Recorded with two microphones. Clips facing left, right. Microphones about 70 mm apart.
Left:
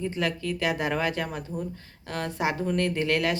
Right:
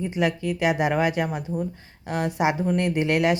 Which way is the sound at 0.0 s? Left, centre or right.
Centre.